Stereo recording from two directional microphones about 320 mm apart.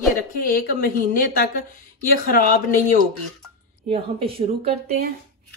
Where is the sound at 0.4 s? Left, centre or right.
Left.